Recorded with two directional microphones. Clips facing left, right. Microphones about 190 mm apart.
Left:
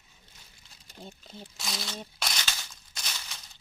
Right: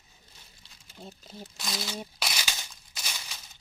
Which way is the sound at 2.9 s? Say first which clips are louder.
Right 1 dB; 5° right (ahead or behind).